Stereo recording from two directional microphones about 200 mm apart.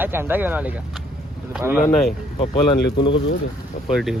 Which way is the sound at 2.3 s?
25° left (ahead or behind).